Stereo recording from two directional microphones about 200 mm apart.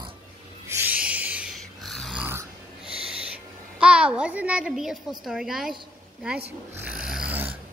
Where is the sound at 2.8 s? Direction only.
30° right (ahead or behind).